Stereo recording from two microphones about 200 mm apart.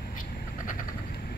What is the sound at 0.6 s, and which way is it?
Vehicle, 45° left (ahead or behind).